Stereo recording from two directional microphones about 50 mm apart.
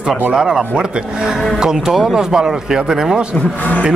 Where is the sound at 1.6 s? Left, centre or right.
Centre.